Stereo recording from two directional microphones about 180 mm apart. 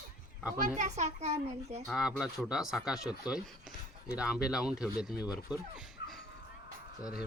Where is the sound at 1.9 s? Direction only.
Centre (ahead or behind).